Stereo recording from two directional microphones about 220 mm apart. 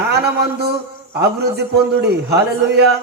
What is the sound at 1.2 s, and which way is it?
A man's voice, 50° right (ahead or behind).